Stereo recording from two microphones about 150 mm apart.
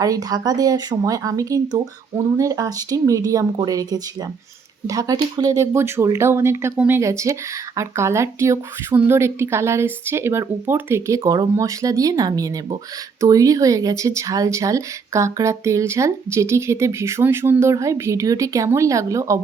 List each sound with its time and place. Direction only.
0.0 s speech: 25° right (ahead or behind)